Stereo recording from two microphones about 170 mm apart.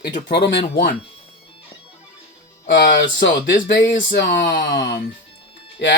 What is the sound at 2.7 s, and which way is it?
Speech, 80° left.